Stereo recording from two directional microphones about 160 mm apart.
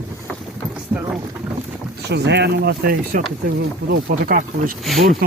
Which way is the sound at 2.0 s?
90° right.